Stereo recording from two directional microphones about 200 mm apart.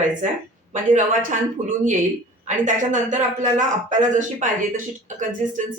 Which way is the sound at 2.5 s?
40° right (ahead or behind).